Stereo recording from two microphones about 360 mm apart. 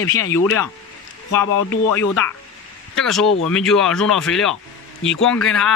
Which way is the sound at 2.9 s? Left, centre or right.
Centre.